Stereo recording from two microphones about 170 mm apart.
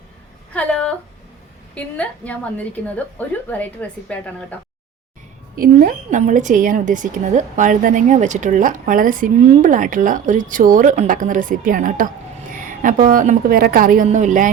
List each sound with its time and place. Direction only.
0.5 s a woman's voice: 5° left (ahead or behind)
5.5 s a woman's voice: 55° right (ahead or behind)